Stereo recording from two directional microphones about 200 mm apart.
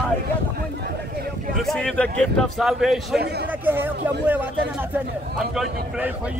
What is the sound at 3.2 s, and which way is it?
Speech, 55° right (ahead or behind).